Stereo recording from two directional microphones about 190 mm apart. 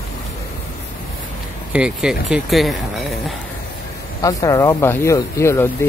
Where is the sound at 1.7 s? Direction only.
5° right (ahead or behind).